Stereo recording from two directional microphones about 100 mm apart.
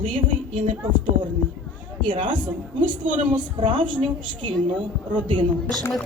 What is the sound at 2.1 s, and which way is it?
A woman's voice, 55° right (ahead or behind).